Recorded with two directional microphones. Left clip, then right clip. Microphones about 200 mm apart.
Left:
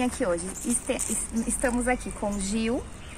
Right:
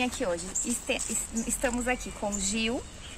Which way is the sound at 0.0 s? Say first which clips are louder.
Left 3 dB; 5° right (ahead or behind).